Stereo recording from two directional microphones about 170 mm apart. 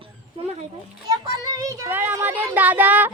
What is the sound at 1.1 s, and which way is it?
Child singing, 20° right (ahead or behind).